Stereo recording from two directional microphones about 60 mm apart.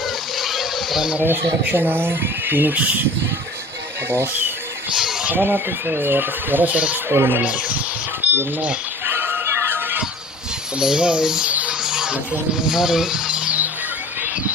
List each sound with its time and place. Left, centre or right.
0.3 s a sound: centre
1.2 s speech: right
4.1 s speech: right
4.9 s a sound: centre
5.3 s speech: right
7.1 s speech: right
7.4 s speech: right
8.2 s cash register: right
9.0 s music: right
10.8 s speech: centre
11.4 s music: right
11.8 s music: centre
12.1 s speech: centre